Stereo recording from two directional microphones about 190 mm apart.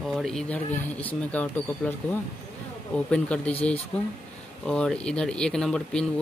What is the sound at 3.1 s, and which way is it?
Speech, 5° left (ahead or behind).